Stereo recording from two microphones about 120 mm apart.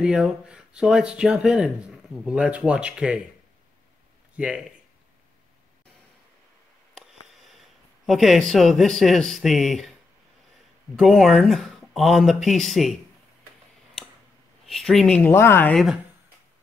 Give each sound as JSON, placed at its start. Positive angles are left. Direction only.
{"t": 0.0, "sound": "speech", "side_deg": -5}
{"t": 4.4, "sound": "speech", "side_deg": -10}
{"t": 7.0, "sound": "a sound", "side_deg": -5}
{"t": 8.1, "sound": "speech", "side_deg": 0}
{"t": 11.0, "sound": "speech", "side_deg": 0}
{"t": 14.7, "sound": "speech", "side_deg": 0}
{"t": 15.3, "sound": "speech", "side_deg": 20}
{"t": 15.7, "sound": "speech", "side_deg": 0}